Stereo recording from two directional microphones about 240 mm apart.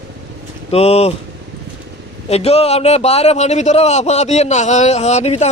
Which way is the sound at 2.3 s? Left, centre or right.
Left.